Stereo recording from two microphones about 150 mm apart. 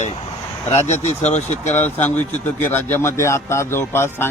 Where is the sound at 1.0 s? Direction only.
50° left (ahead or behind).